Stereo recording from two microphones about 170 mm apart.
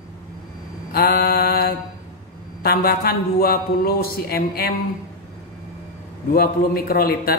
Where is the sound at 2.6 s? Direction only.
65° left (ahead or behind).